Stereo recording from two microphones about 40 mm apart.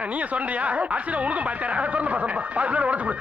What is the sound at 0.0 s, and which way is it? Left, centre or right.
Speech, right.